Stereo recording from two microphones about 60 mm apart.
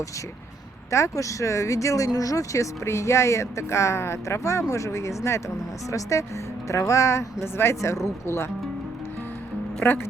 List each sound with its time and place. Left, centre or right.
0.9 s speech: left
9.8 s speech: left